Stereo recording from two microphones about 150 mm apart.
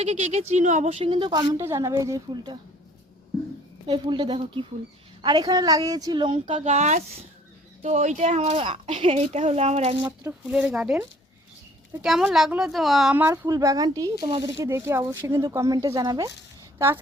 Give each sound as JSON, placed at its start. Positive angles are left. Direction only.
{"t": 0.0, "sound": "speech", "side_deg": -45}
{"t": 3.8, "sound": "speech", "side_deg": -30}
{"t": 6.7, "sound": "speech", "side_deg": -50}
{"t": 10.5, "sound": "speech", "side_deg": -5}
{"t": 12.0, "sound": "a woman's voice", "side_deg": 0}
{"t": 13.1, "sound": "speech", "side_deg": -15}
{"t": 16.7, "sound": "a woman's voice", "side_deg": -15}